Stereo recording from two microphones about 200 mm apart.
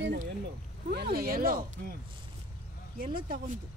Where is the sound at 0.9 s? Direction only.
50° right (ahead or behind).